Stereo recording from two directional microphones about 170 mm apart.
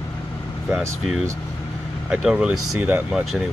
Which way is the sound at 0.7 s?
5° right (ahead or behind).